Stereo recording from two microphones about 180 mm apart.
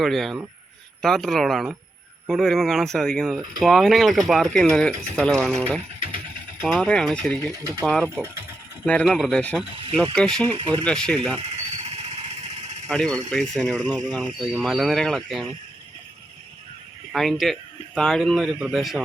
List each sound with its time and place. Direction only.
0.0 s speech: centre (ahead or behind)
8.0 s speech: 15° right (ahead or behind)
8.9 s speech: 5° left (ahead or behind)
10.5 s speech: 30° right (ahead or behind)
10.8 s speech: 5° left (ahead or behind)
11.3 s a sound: 35° right (ahead or behind)
12.9 s speech: 5° left (ahead or behind)
17.1 s speech: centre (ahead or behind)